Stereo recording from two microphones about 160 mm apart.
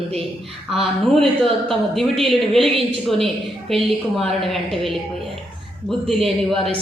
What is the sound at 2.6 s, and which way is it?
Speech, 35° right (ahead or behind).